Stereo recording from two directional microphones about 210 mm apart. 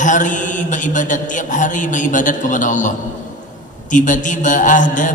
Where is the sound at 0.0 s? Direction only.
35° left (ahead or behind).